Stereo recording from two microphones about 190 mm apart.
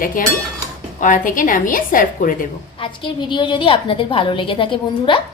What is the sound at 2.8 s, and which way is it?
A woman's voice, 25° left (ahead or behind).